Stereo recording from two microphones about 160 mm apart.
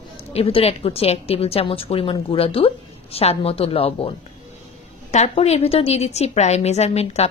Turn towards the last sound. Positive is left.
turn(degrees=40)  # may be behind; listen again after turning